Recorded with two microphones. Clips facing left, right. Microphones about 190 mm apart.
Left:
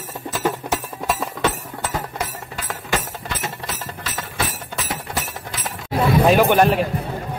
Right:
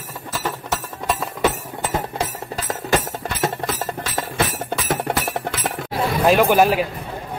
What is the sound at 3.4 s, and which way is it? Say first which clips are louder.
Music: right 7 dB; 50° right (ahead or behind).